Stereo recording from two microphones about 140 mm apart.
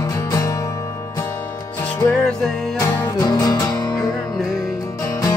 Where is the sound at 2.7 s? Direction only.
25° left (ahead or behind).